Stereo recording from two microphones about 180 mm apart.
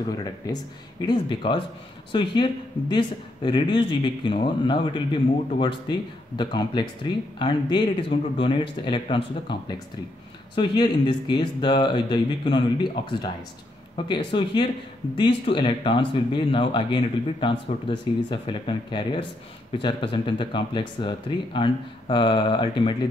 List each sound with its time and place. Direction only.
0.1 s speech: 20° left (ahead or behind)